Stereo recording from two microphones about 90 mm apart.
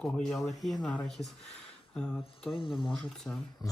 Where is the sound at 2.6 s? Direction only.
65° left (ahead or behind).